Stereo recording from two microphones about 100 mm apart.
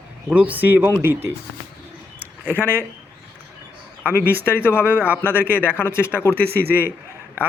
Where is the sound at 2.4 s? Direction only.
20° right (ahead or behind).